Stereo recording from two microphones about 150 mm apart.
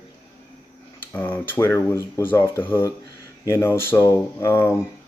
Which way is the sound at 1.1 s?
10° left (ahead or behind).